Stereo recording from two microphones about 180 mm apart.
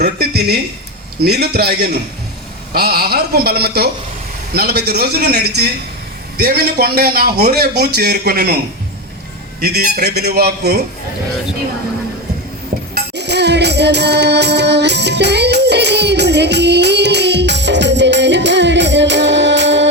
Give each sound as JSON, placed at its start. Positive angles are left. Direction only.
{"t": 0.0, "sound": "a woman's voice", "side_deg": -60}
{"t": 9.6, "sound": "a man's voice", "side_deg": -60}
{"t": 12.9, "sound": "music", "side_deg": -70}